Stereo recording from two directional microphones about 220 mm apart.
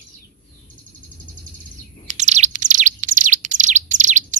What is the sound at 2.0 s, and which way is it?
Bird, 30° right (ahead or behind).